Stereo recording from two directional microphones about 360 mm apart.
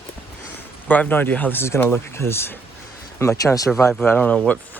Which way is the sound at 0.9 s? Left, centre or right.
Centre.